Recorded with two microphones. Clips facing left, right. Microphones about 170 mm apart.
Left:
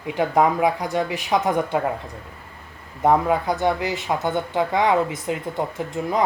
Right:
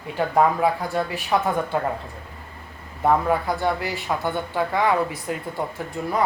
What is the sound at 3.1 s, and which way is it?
Speech, 20° left (ahead or behind).